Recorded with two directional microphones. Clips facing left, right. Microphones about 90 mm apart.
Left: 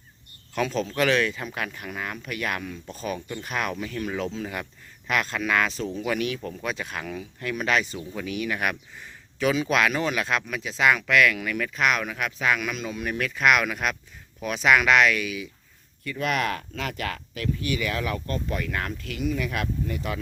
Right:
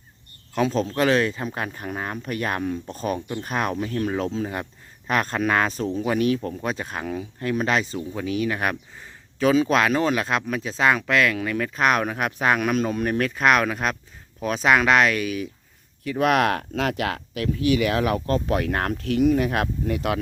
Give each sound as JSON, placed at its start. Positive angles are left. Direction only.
{"t": 0.5, "sound": "speech", "side_deg": -30}
{"t": 16.0, "sound": "speech", "side_deg": -65}